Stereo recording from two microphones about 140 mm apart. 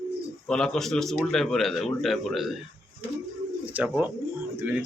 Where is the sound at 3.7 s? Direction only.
10° right (ahead or behind).